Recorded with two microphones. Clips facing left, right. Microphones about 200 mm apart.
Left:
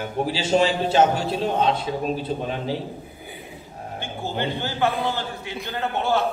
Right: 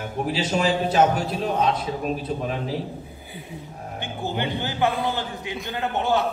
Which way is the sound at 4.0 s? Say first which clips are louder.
Even; 15° right (ahead or behind).